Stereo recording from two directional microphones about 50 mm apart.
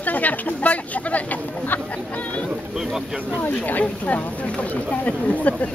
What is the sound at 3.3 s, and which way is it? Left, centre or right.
Speech, left.